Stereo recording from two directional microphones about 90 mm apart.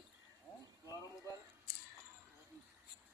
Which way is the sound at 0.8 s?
40° left (ahead or behind).